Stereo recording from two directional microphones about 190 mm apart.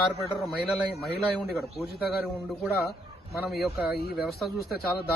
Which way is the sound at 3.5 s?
Centre (ahead or behind).